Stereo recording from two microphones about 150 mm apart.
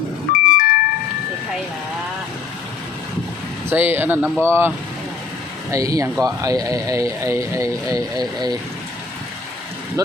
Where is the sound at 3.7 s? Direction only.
15° right (ahead or behind).